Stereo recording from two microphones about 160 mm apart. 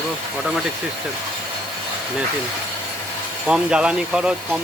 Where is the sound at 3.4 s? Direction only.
5° right (ahead or behind).